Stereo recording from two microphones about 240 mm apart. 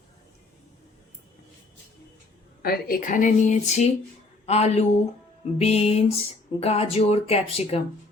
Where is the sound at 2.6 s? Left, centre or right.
Left.